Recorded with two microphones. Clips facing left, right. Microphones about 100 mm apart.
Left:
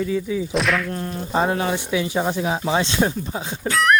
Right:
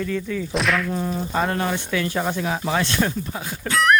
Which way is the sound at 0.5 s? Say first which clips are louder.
Right 1 dB; centre (ahead or behind).